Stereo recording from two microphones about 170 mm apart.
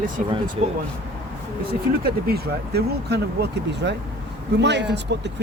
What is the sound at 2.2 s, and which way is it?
Speech, 65° right (ahead or behind).